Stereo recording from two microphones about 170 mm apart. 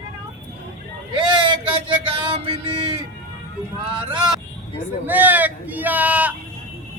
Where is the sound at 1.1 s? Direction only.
25° right (ahead or behind).